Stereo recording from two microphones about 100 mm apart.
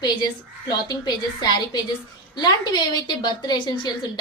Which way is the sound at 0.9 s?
45° left (ahead or behind).